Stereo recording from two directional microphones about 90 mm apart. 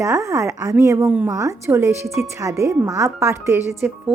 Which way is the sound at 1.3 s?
35° right (ahead or behind).